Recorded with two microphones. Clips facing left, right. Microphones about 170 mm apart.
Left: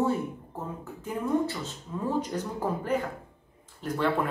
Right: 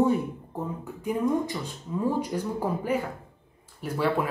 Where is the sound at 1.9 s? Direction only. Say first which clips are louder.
Right 3 dB; 10° right (ahead or behind).